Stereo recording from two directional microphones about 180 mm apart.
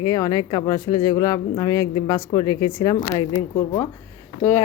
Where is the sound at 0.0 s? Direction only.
20° left (ahead or behind).